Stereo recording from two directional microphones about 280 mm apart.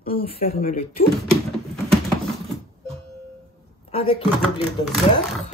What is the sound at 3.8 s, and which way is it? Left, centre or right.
Speech, left.